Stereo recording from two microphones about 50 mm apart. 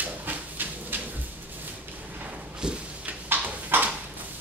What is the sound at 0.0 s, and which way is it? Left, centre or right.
Dog, right.